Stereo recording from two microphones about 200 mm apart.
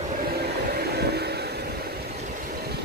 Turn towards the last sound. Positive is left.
turn(degrees=-55)  # may be behind; listen again after turning